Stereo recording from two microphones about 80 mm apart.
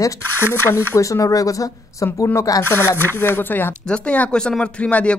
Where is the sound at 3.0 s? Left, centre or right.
Left.